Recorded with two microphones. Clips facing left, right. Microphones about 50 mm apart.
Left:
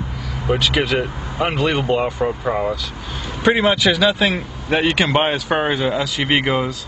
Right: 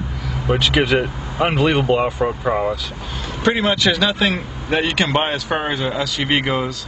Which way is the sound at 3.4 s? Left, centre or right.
Centre.